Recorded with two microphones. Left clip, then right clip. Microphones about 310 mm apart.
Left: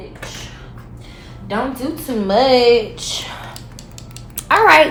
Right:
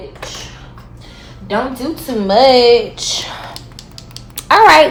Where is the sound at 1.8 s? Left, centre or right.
Right.